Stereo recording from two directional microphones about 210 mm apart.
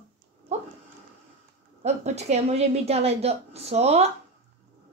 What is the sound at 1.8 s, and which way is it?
A woman's voice, 30° right (ahead or behind).